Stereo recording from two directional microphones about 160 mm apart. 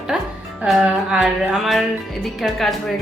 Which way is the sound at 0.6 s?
5° right (ahead or behind).